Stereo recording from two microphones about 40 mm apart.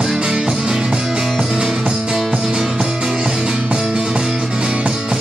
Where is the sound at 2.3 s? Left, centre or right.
Right.